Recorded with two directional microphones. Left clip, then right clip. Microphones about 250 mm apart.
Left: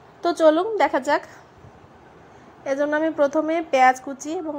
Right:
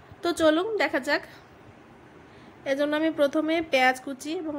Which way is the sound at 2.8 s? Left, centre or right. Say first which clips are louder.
Left 4 dB; centre.